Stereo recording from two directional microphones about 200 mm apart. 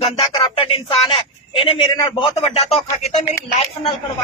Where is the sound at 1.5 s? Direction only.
25° left (ahead or behind).